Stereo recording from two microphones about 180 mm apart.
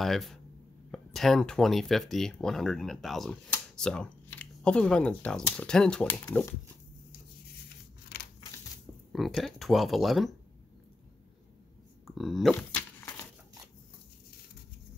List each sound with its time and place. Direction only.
0.0 s speech: centre (ahead or behind)
8.1 s crushing: 60° left (ahead or behind)
9.1 s speech: centre (ahead or behind)
12.2 s speech: centre (ahead or behind)